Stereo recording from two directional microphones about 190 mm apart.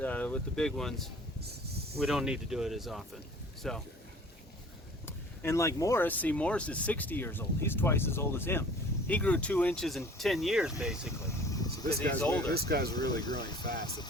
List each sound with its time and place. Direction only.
0.0 s speech: 10° left (ahead or behind)
5.0 s speech: 15° left (ahead or behind); by 11.1 s 5° right (ahead or behind)
11.3 s a sound: 20° left (ahead or behind)
12.5 s speech: 55° right (ahead or behind)
12.9 s speech: 20° left (ahead or behind)
13.7 s speech: 55° right (ahead or behind)